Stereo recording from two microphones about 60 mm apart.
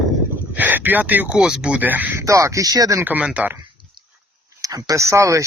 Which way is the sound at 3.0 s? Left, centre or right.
Right.